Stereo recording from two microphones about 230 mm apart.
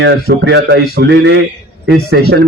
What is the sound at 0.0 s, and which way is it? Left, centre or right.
A man's voice, right.